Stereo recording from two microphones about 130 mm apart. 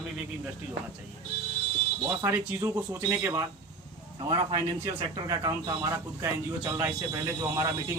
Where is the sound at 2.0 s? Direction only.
20° right (ahead or behind).